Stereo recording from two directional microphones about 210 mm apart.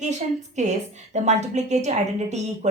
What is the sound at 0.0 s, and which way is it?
A woman's voice, 35° right (ahead or behind).